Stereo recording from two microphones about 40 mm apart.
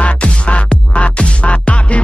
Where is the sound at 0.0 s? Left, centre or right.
Left.